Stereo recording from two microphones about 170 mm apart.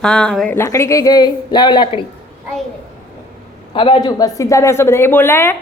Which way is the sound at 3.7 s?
30° left (ahead or behind).